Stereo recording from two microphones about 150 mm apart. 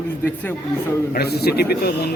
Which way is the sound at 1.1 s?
90° left.